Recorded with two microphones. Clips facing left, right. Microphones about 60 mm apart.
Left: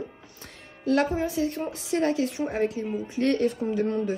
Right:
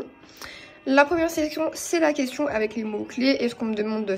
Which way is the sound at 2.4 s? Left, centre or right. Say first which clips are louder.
Right 2 dB; right.